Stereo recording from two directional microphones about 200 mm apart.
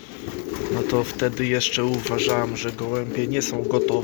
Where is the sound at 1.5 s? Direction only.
10° right (ahead or behind).